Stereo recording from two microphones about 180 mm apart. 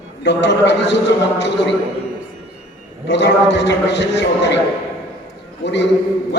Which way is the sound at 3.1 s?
80° left.